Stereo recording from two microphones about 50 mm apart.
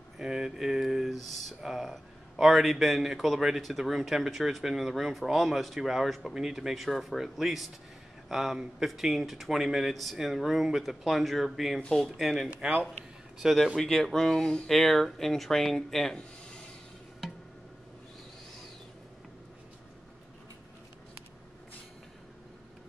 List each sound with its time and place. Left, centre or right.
0.2 s a man's voice: centre
12.4 s speech: right
13.4 s a man's voice: centre